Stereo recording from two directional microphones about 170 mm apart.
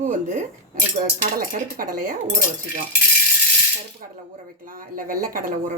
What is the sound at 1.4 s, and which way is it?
Speech, 55° right (ahead or behind).